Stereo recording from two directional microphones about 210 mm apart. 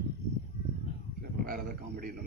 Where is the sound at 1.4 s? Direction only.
45° right (ahead or behind).